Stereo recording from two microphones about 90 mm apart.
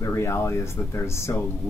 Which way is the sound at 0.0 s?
30° left (ahead or behind).